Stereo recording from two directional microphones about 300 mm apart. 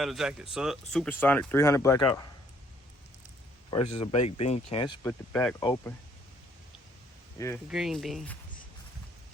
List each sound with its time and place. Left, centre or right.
0.0 s speech: centre
3.9 s speech: centre
5.3 s speech: centre
7.3 s speech: centre
7.7 s speech: centre